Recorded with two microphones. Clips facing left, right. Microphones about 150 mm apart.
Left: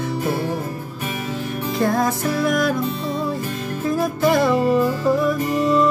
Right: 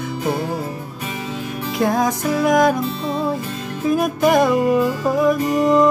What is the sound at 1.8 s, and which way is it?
Music, 15° right (ahead or behind).